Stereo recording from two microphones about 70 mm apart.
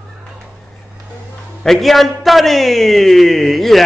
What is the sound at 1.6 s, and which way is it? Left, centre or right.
A man's voice, centre.